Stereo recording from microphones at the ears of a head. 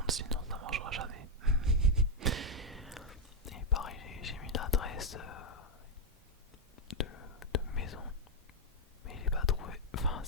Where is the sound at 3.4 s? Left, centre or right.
Left.